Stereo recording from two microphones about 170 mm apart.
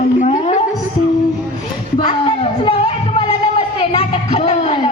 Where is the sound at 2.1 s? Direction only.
35° left (ahead or behind).